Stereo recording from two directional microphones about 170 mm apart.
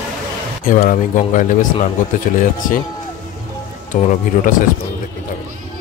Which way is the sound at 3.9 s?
50° left (ahead or behind).